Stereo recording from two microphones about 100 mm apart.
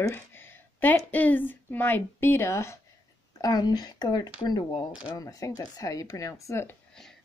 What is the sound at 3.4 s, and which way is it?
Speech, 40° left (ahead or behind).